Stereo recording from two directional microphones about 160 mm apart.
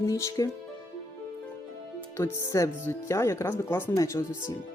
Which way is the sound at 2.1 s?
15° left (ahead or behind).